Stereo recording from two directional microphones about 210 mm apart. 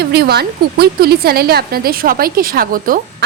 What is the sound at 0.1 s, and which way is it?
A woman's voice, 50° right (ahead or behind).